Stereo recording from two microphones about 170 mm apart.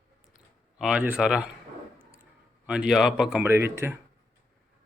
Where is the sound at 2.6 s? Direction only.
5° right (ahead or behind).